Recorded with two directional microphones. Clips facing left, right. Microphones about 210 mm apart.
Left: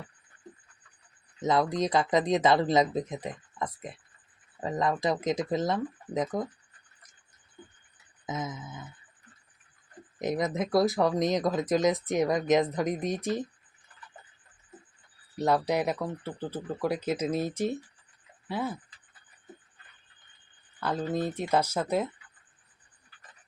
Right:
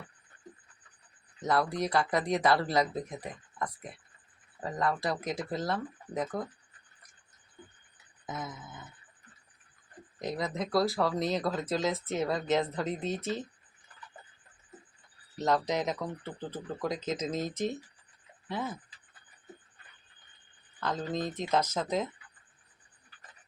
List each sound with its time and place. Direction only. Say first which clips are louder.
1.4 s speech: left 3 dB; 20° left (ahead or behind)
8.3 s speech: left 5 dB; 20° left (ahead or behind)
10.2 s speech: left 5 dB; 20° left (ahead or behind)
15.4 s speech: left 3 dB; 10° left (ahead or behind)
20.8 s speech: left 3 dB; 10° left (ahead or behind)